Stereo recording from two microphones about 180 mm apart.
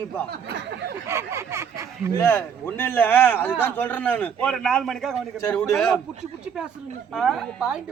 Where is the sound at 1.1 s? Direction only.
15° right (ahead or behind).